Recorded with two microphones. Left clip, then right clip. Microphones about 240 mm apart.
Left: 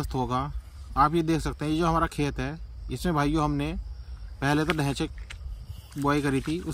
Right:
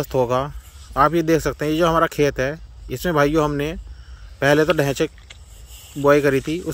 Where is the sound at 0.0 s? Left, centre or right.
Centre.